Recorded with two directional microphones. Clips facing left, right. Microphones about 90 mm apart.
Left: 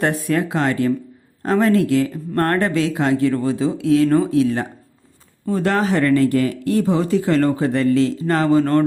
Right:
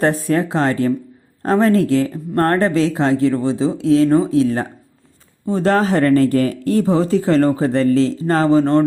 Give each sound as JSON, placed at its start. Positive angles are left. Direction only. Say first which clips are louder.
{"t": 0.0, "sound": "speech", "louder": "right 3 dB", "side_deg": -35}